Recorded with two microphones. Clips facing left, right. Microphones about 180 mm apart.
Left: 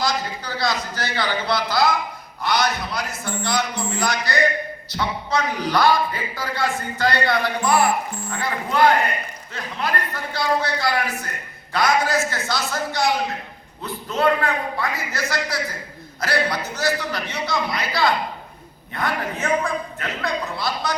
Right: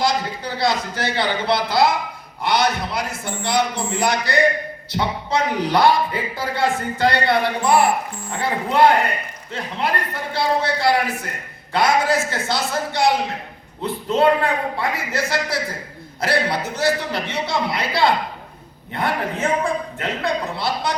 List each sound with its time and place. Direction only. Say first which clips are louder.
0.0 s a man's voice: right 3 dB; 25° right (ahead or behind)